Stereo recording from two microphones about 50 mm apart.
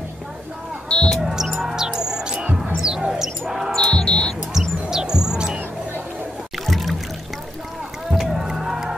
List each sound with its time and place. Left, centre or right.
0.8 s basketball bounce: centre
1.2 s music: centre
3.7 s basketball bounce: centre
4.6 s music: centre
6.6 s music: centre
8.1 s music: centre